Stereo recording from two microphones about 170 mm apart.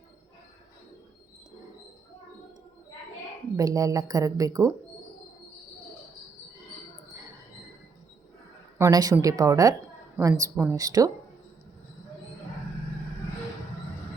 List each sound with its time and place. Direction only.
3.6 s speech: 20° right (ahead or behind)
8.8 s speech: 20° right (ahead or behind)